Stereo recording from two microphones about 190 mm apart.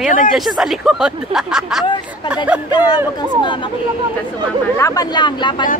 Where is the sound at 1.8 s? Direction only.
25° left (ahead or behind).